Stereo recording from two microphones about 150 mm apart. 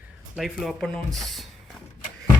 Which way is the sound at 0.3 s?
Centre (ahead or behind).